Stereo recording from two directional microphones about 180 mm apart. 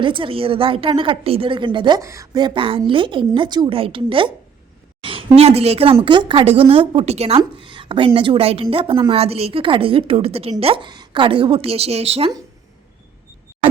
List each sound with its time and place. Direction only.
0.0 s a woman's voice: 30° right (ahead or behind)